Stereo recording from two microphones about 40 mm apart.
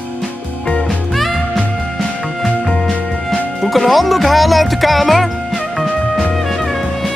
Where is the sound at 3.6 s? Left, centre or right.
Centre.